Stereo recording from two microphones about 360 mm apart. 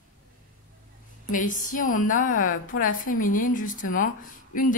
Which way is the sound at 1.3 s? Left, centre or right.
Left.